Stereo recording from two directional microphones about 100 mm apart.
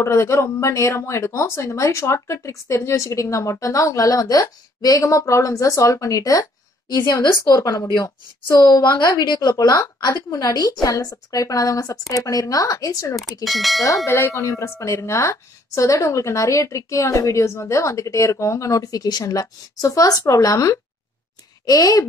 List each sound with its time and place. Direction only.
0.0 s speech: 30° left (ahead or behind)
13.2 s speech: centre (ahead or behind)
13.8 s speech: 30° left (ahead or behind)